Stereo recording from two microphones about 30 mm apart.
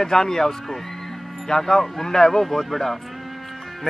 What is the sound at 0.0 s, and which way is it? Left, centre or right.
Speech, centre.